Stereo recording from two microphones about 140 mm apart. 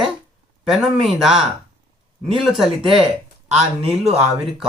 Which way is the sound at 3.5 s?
45° right (ahead or behind).